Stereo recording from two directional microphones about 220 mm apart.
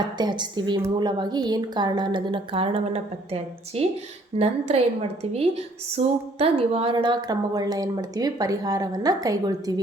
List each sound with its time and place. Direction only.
0.2 s a woman's voice: 20° right (ahead or behind)